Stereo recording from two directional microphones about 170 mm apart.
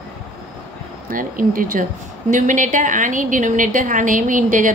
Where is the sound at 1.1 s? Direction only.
55° right (ahead or behind).